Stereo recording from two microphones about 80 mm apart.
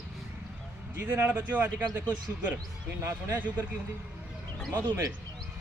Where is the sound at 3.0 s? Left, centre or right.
Right.